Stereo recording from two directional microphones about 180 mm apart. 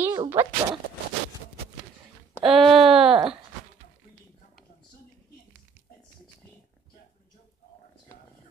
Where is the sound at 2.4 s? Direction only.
Centre (ahead or behind).